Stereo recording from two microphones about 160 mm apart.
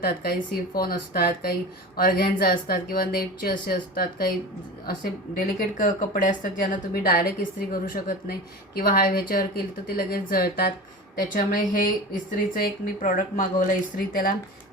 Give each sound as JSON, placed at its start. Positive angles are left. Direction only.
{"t": 0.0, "sound": "a woman's voice", "side_deg": 70}
{"t": 5.4, "sound": "a woman's voice", "side_deg": 60}
{"t": 7.0, "sound": "a woman's voice", "side_deg": 70}